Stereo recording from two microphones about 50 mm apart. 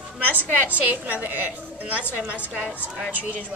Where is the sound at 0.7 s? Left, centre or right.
Right.